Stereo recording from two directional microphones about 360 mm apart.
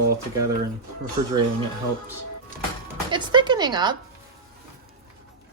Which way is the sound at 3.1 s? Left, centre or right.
Centre.